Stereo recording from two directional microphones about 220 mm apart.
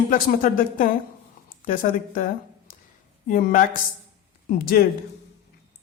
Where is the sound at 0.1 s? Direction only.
40° left (ahead or behind).